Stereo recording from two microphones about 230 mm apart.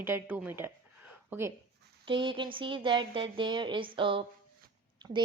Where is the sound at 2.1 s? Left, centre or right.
Right.